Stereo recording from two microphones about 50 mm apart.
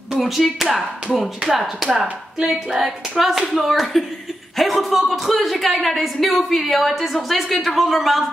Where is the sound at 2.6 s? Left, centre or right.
Centre.